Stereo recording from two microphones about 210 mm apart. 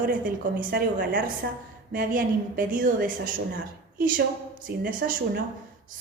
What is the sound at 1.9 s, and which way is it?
A woman's voice, 40° right (ahead or behind).